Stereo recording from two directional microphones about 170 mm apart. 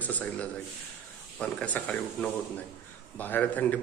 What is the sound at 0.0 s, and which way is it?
A man's voice, 10° left (ahead or behind).